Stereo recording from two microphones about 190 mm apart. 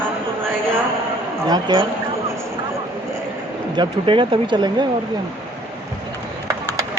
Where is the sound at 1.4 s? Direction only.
20° right (ahead or behind).